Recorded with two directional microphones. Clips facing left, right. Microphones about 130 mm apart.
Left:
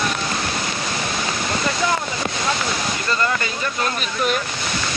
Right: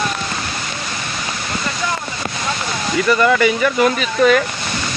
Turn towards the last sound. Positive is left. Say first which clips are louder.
# right 8 dB
turn(degrees=-90)